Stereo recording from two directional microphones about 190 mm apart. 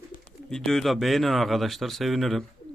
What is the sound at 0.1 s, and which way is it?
Bird, 45° left (ahead or behind).